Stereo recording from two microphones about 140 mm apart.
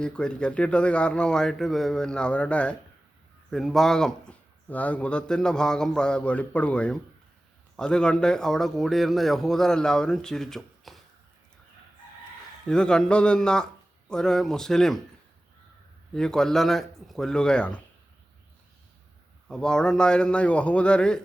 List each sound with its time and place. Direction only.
0.0 s speech: 5° left (ahead or behind)
12.6 s speech: 5° left (ahead or behind)
16.1 s speech: 5° left (ahead or behind)
19.5 s speech: 5° left (ahead or behind)